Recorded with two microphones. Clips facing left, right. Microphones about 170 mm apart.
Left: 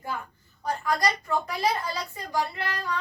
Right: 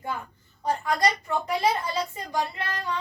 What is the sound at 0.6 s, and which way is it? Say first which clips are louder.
A child's voice: right 2 dB; 25° right (ahead or behind).